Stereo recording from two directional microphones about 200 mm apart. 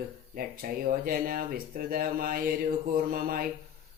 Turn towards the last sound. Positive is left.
turn(degrees=-45)  # may be behind; listen again after turning